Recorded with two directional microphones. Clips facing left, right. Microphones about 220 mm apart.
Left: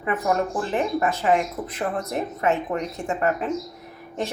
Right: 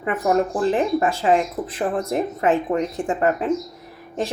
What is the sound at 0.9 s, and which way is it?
A woman's voice, 30° right (ahead or behind).